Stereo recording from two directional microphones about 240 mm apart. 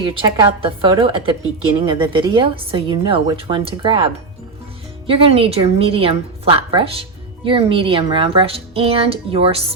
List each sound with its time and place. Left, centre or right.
0.0 s a woman's voice: right